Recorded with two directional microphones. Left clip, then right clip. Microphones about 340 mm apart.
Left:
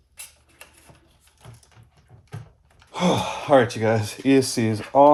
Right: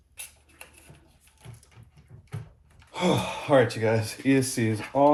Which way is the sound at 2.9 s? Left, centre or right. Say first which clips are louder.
Left 3 dB; left.